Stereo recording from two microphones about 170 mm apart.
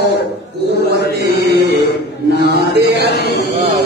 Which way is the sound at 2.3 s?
80° right.